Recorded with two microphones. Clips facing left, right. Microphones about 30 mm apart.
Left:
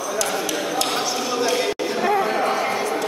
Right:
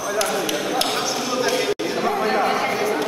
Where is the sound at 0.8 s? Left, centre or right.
Centre.